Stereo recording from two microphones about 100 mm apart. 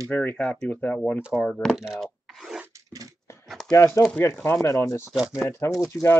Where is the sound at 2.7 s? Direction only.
35° right (ahead or behind).